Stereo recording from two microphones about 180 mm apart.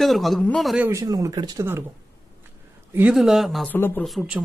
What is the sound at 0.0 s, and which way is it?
Speech, centre (ahead or behind).